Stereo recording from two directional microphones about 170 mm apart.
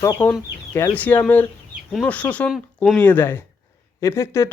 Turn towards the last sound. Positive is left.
turn(degrees=15)  # may be behind; listen again after turning